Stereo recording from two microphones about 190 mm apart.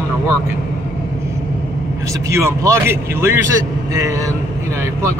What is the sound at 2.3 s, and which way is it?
Speech, 15° right (ahead or behind).